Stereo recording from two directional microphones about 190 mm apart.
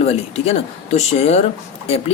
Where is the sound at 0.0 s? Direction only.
30° left (ahead or behind).